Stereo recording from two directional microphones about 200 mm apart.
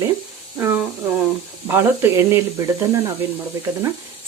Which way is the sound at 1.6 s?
10° right (ahead or behind).